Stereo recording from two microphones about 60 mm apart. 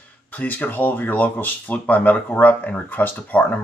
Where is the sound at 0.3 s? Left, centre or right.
Left.